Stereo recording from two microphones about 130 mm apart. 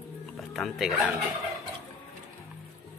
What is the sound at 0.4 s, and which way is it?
Speech, centre (ahead or behind).